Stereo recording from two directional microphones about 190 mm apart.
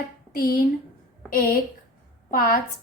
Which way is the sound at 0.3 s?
50° left (ahead or behind).